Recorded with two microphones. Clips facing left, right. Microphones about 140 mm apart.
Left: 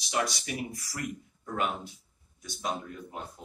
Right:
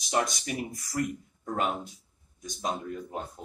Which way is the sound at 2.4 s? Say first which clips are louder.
Right 2 dB; 40° right (ahead or behind).